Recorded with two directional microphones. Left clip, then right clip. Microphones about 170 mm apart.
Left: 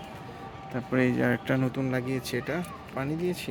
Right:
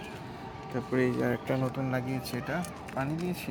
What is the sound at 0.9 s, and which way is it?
Speech, 40° left (ahead or behind).